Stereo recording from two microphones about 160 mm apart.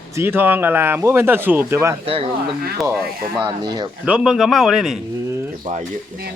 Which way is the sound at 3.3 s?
25° right (ahead or behind).